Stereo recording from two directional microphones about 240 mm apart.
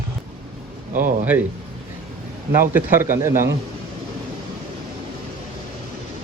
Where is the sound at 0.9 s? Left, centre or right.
Right.